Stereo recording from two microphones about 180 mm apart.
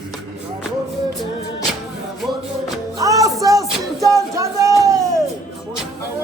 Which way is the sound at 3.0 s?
20° right (ahead or behind).